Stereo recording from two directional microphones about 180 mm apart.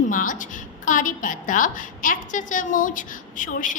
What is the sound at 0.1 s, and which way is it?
A woman's voice, 50° left (ahead or behind).